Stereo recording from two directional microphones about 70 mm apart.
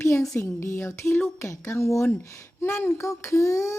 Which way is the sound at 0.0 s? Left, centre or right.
Left.